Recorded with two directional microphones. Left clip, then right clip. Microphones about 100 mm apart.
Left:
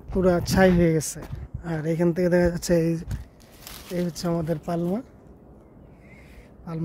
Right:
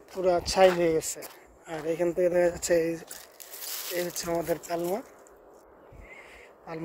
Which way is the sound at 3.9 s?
40° left (ahead or behind).